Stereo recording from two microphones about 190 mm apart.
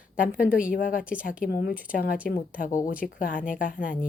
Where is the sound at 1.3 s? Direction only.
50° left (ahead or behind).